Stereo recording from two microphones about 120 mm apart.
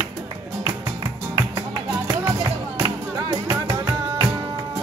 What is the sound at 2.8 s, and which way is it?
Music, 35° right (ahead or behind).